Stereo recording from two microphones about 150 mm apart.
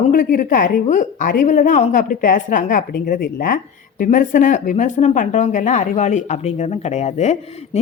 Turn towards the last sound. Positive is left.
turn(degrees=45)  # may be behind; listen again after turning